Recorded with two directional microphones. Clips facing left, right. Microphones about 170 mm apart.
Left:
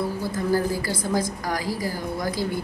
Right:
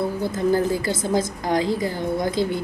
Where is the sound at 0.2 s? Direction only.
20° right (ahead or behind).